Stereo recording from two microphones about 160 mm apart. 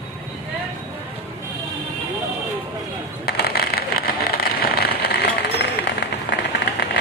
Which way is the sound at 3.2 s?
75° left (ahead or behind).